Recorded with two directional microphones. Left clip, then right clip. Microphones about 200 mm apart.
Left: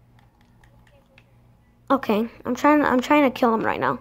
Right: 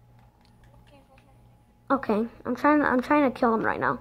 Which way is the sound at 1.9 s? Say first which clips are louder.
Left 4 dB; 10° left (ahead or behind).